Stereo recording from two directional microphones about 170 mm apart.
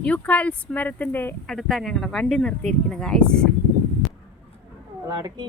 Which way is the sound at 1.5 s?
Centre (ahead or behind).